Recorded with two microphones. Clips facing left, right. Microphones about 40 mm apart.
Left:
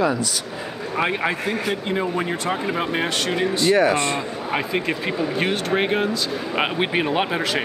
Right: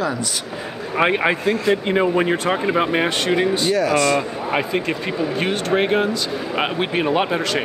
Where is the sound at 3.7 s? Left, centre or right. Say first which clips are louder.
Right 3 dB; left.